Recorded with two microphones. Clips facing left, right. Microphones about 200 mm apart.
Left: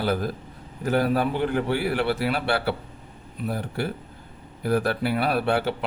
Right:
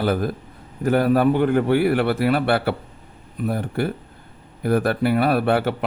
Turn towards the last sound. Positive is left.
turn(degrees=-55)  # may be behind; listen again after turning